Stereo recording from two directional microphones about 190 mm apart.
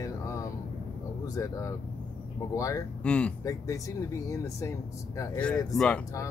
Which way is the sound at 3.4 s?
15° left (ahead or behind).